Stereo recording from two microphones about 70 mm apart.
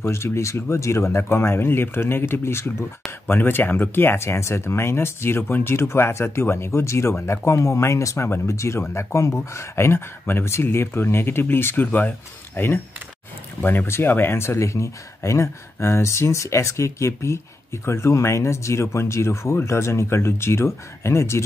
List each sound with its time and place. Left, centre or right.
0.0 s speech: left